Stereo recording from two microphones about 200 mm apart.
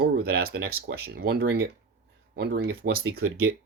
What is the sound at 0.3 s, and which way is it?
Speech, 50° right (ahead or behind).